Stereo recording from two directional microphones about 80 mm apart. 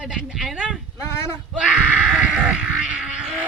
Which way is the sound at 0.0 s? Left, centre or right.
Centre.